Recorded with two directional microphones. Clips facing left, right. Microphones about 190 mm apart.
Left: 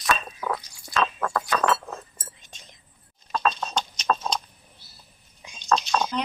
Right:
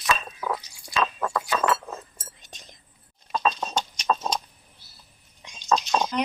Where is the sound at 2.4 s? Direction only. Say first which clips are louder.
Right 2 dB; 40° right (ahead or behind).